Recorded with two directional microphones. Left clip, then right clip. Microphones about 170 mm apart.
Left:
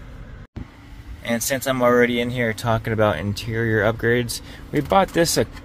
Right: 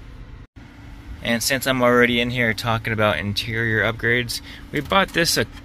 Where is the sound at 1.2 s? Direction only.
15° left (ahead or behind).